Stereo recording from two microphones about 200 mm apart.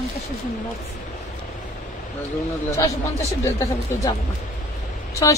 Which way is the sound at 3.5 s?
15° left (ahead or behind).